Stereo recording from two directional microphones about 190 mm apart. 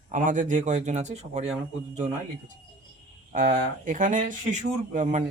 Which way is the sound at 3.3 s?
40° right (ahead or behind).